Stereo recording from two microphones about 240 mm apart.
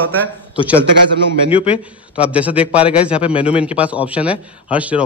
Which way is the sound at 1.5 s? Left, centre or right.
Left.